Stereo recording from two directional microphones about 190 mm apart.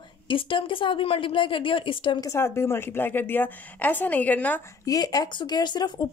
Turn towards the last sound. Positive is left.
turn(degrees=20)  # may be behind; listen again after turning